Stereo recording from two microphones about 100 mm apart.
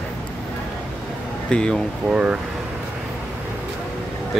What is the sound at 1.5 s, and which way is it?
Speech, 10° left (ahead or behind).